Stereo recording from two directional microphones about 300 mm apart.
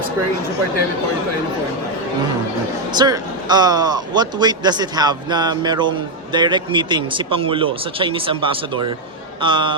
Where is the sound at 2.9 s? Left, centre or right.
Centre.